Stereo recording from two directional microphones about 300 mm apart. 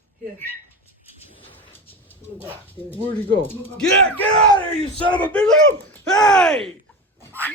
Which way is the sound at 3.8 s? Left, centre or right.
Centre.